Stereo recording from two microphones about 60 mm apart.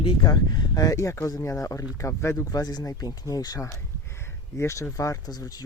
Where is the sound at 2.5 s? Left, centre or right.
Left.